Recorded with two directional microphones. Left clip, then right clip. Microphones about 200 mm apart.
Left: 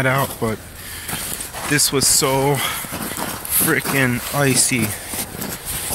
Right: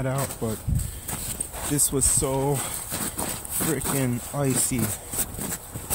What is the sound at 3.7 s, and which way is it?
Speech, 15° right (ahead or behind).